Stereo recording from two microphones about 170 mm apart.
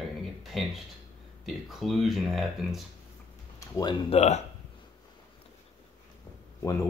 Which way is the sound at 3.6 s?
20° left (ahead or behind).